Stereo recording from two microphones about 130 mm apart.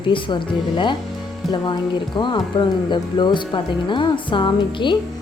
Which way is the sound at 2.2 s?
35° left (ahead or behind).